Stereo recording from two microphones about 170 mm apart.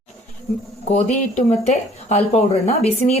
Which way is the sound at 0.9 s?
40° left (ahead or behind).